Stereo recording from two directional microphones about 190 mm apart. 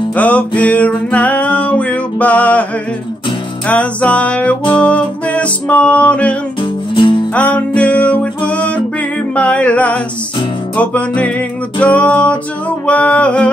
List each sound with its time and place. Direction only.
0.1 s music: 10° left (ahead or behind)
3.6 s music: 5° left (ahead or behind)
6.6 s music: 25° left (ahead or behind)
7.3 s music: 5° left (ahead or behind)